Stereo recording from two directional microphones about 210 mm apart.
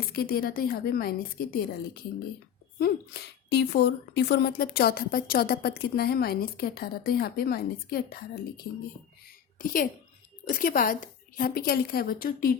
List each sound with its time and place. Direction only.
0.1 s a woman's voice: 45° left (ahead or behind)
9.6 s a woman's voice: 40° left (ahead or behind)